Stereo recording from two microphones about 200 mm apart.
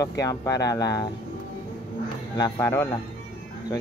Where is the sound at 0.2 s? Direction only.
15° left (ahead or behind).